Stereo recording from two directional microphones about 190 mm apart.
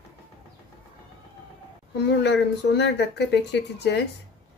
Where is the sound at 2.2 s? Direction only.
65° left (ahead or behind).